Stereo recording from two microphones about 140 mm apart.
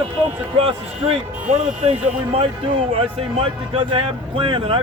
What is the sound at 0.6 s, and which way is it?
Speech, 45° right (ahead or behind).